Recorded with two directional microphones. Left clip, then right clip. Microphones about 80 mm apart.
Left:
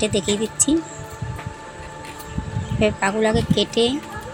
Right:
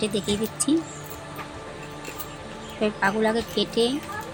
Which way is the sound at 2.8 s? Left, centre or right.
Left.